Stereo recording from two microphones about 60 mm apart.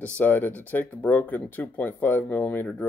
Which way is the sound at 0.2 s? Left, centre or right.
Left.